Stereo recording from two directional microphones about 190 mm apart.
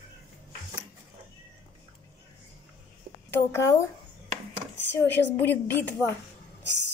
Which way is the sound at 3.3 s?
15° left (ahead or behind).